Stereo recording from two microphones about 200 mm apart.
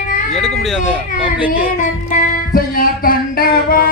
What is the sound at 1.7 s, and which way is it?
Music, 40° left (ahead or behind).